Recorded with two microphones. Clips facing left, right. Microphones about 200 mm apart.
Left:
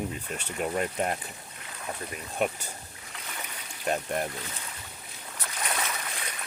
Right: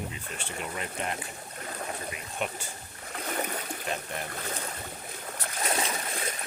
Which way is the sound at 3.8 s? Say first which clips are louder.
Left 9 dB; 50° left (ahead or behind).